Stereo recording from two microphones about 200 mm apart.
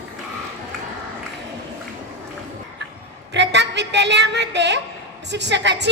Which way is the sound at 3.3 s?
60° right (ahead or behind).